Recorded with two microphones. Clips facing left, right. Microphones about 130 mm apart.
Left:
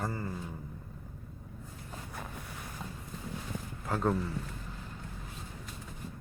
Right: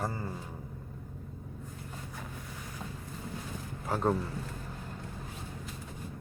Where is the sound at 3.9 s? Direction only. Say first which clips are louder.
Right 1 dB; 15° right (ahead or behind).